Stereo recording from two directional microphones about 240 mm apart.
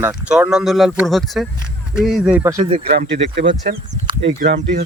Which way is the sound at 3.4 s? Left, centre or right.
Right.